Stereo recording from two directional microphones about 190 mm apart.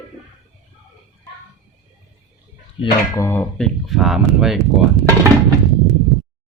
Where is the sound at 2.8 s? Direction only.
15° left (ahead or behind).